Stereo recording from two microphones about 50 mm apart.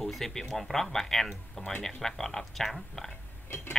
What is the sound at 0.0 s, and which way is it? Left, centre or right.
Speech, centre.